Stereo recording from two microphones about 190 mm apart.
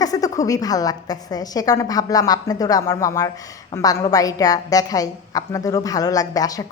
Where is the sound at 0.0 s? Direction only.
20° left (ahead or behind).